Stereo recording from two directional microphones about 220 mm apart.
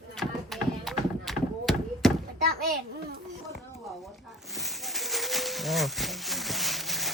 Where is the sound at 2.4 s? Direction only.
45° right (ahead or behind).